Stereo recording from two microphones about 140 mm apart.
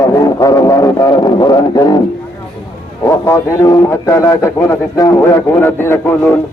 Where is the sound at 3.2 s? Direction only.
20° left (ahead or behind).